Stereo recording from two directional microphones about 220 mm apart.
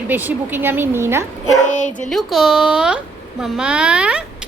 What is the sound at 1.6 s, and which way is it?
Speech, 35° left (ahead or behind).